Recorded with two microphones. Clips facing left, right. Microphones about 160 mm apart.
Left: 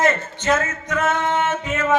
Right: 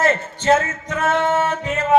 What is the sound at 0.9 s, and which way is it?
A man's voice, 30° right (ahead or behind).